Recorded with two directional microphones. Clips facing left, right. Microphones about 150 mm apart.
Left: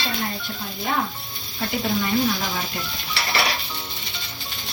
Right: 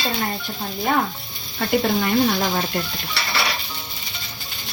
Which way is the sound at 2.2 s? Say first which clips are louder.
Right 4 dB; 50° right (ahead or behind).